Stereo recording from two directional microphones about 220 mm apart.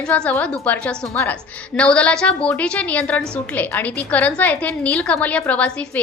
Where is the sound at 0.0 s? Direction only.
5° left (ahead or behind).